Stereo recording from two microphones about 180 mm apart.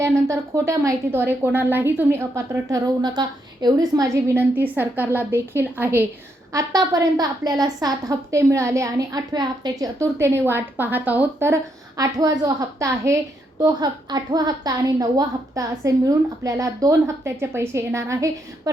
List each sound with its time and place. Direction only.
0.0 s a woman's voice: 15° right (ahead or behind)